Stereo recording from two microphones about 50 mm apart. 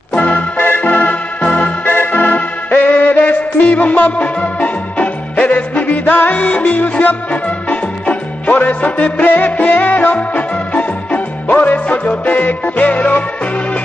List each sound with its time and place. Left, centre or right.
0.1 s music: left
0.6 s music: left
0.8 s music: left